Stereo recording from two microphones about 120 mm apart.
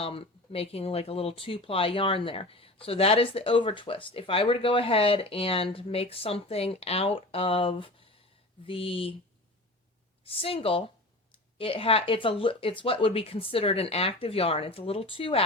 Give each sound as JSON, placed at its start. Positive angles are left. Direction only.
{"t": 0.0, "sound": "speech", "side_deg": 50}
{"t": 10.2, "sound": "speech", "side_deg": 50}